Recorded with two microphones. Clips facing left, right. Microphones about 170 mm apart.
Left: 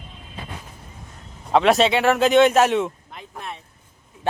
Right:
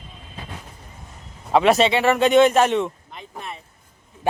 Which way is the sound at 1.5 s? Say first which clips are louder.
Even; centre (ahead or behind).